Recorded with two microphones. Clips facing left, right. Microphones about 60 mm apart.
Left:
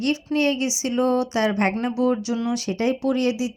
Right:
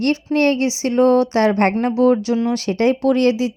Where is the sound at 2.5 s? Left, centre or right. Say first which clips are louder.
Right 6 dB; right.